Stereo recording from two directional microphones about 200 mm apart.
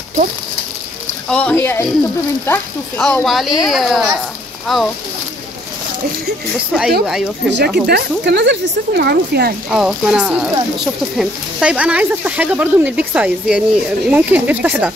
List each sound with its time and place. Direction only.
1.3 s speech: 10° left (ahead or behind)
3.0 s speech: centre (ahead or behind)
7.4 s speech: 55° right (ahead or behind)
9.7 s speech: 5° right (ahead or behind)